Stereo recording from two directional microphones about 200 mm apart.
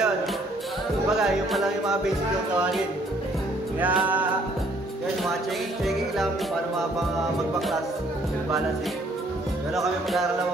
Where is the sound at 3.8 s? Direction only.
10° right (ahead or behind).